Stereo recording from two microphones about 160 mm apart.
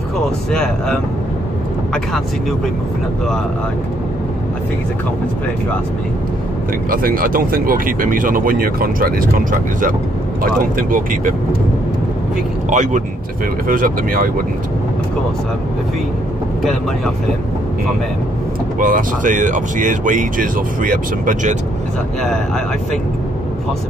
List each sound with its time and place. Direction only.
0.5 s speech: 5° left (ahead or behind)
6.9 s speech: 65° right (ahead or behind)
12.6 s speech: 50° right (ahead or behind)
13.7 s speech: 60° right (ahead or behind)
18.8 s speech: 60° right (ahead or behind)